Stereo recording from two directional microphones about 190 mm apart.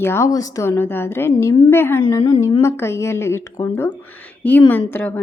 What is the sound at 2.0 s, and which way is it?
A woman's voice, 25° left (ahead or behind).